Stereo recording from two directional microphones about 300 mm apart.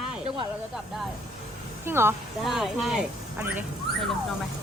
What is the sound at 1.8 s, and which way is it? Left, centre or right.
Speech, centre.